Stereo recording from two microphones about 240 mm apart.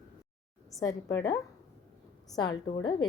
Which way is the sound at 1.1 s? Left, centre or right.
Centre.